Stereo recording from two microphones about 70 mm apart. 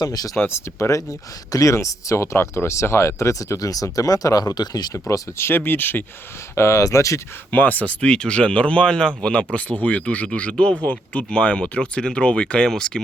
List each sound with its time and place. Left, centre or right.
0.0 s speech: left
0.3 s speech: left
5.4 s speech: left
6.6 s speech: left
7.5 s speech: left